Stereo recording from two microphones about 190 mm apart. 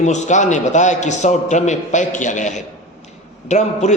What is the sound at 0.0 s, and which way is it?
A man's voice, 40° left (ahead or behind).